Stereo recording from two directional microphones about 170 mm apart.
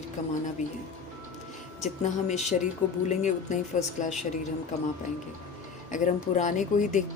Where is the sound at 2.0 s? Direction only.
45° left (ahead or behind).